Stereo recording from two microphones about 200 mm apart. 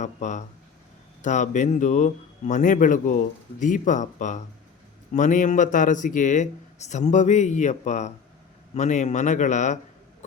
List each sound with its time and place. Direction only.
0.0 s a man's voice: 35° left (ahead or behind)